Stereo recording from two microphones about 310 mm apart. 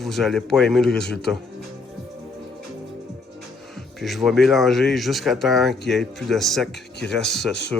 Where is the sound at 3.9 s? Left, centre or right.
Centre.